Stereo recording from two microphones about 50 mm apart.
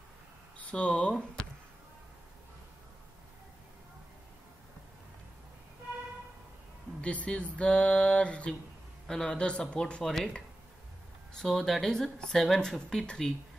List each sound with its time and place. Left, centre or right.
0.6 s speech: left
7.0 s speech: left
11.4 s speech: centre